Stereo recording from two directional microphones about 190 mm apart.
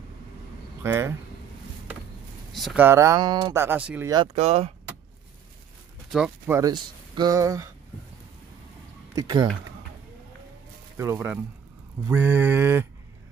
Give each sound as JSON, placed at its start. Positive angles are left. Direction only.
{"t": 0.8, "sound": "speech", "side_deg": -15}
{"t": 2.5, "sound": "speech", "side_deg": 0}
{"t": 2.8, "sound": "speech", "side_deg": -15}
{"t": 4.1, "sound": "speech", "side_deg": -30}
{"t": 6.1, "sound": "speech", "side_deg": -5}
{"t": 6.6, "sound": "speech", "side_deg": -20}
{"t": 9.1, "sound": "speech", "side_deg": -20}
{"t": 12.1, "sound": "speech", "side_deg": -10}